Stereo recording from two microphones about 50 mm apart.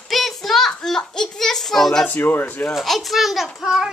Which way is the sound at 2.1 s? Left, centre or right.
Left.